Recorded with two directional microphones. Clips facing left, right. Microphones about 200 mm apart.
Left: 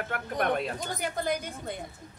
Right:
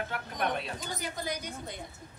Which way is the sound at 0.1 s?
50° left (ahead or behind).